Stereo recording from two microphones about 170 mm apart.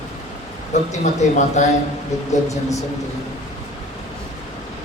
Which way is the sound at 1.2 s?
45° left (ahead or behind).